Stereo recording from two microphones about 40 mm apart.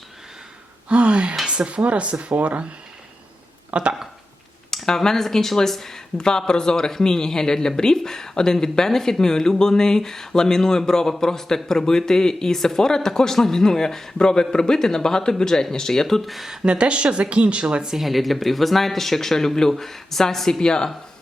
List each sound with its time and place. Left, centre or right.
0.9 s speech: right
3.7 s a sound: right
4.7 s speech: centre
16.6 s speech: right
17.9 s speech: centre